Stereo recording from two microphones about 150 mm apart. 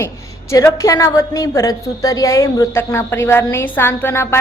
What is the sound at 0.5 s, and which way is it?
A woman's voice, 20° left (ahead or behind).